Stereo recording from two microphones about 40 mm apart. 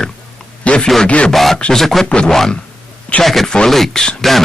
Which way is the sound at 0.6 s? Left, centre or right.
Left.